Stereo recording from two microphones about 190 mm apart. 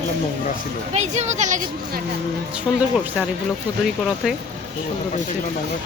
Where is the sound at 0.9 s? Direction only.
35° right (ahead or behind).